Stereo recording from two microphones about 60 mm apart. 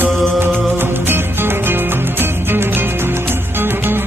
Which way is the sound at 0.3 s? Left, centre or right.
Right.